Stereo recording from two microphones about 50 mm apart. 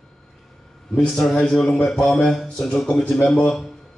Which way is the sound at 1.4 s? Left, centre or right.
Centre.